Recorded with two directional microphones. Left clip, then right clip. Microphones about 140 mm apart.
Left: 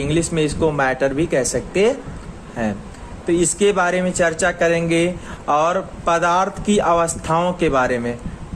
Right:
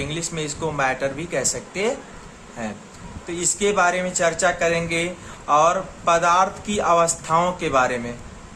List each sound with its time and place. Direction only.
0.0 s speech: 35° left (ahead or behind)
3.2 s speech: 35° left (ahead or behind)